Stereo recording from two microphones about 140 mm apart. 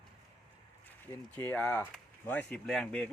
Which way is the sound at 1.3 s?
10° left (ahead or behind).